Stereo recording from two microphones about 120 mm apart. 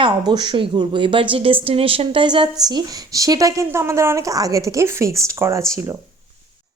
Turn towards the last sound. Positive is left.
turn(degrees=-25)  # may be behind; listen again after turning